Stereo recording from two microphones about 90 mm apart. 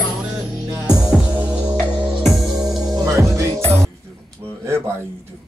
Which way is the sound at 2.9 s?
35° right (ahead or behind).